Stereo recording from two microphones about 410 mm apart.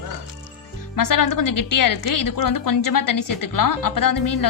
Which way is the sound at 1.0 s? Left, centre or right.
Left.